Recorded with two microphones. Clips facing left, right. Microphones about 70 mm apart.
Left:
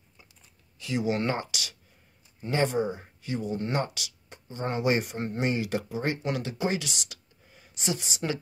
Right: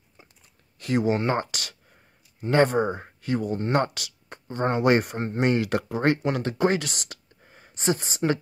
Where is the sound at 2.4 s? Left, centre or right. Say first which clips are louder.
Right 6 dB; right.